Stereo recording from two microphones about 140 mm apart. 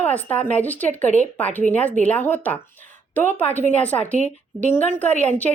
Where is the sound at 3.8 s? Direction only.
10° left (ahead or behind).